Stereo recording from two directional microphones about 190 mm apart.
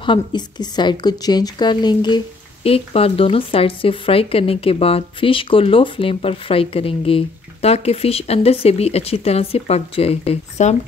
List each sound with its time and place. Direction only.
0.0 s speech: 25° left (ahead or behind)